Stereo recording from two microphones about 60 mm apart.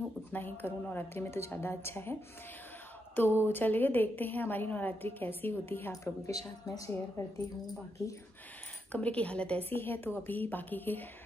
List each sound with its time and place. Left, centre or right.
0.3 s a woman's voice: left
3.2 s a woman's voice: left
5.9 s a woman's voice: left
6.6 s a woman's voice: left
7.2 s speech: left
8.9 s speech: left
9.7 s a woman's voice: left